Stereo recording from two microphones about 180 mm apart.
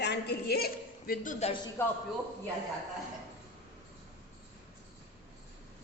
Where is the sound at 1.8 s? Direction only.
15° left (ahead or behind).